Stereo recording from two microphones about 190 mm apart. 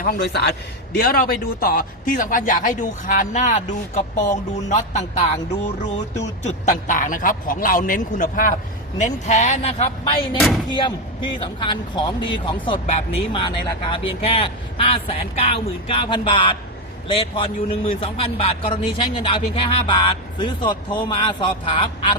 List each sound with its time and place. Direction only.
0.0 s a man's voice: 55° left (ahead or behind)
0.9 s speech: 50° left (ahead or behind); by 10.1 s 35° left (ahead or behind)
10.3 s speech: centre (ahead or behind)
10.7 s a man's voice: 25° left (ahead or behind)